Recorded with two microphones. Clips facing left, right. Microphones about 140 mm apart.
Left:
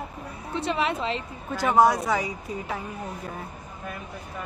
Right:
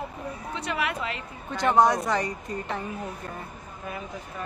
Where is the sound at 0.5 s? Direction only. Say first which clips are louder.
Left 4 dB; 25° left (ahead or behind).